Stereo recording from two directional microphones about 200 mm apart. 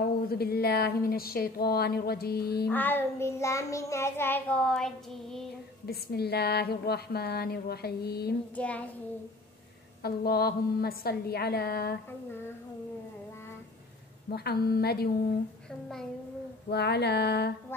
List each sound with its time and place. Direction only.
0.3 s speech: 50° left (ahead or behind)
2.7 s child singing: 10° left (ahead or behind)
5.9 s speech: 50° left (ahead or behind)
8.5 s child singing: 5° left (ahead or behind)
10.0 s speech: 50° left (ahead or behind)
14.3 s speech: 50° left (ahead or behind)
16.7 s a sound: 55° left (ahead or behind)